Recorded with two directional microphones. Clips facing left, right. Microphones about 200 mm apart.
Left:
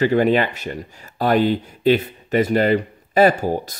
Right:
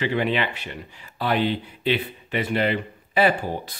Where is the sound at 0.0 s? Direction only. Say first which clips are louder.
Left 7 dB; 45° left (ahead or behind).